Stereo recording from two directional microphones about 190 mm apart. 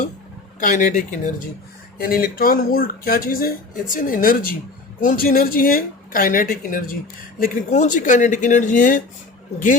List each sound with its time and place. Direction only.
0.6 s speech: 40° left (ahead or behind)